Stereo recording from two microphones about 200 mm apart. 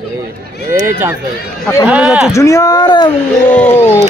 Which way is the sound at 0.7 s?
10° right (ahead or behind).